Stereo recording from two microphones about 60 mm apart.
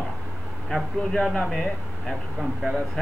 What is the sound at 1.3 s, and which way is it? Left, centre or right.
Speech, centre.